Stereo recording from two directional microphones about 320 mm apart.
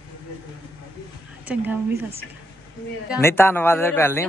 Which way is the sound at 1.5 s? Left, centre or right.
Centre.